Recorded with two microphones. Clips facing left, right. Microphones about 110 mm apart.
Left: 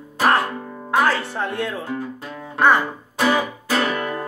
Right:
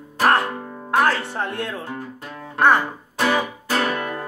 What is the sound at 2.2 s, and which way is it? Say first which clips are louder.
Music: right 1 dB; 5° left (ahead or behind).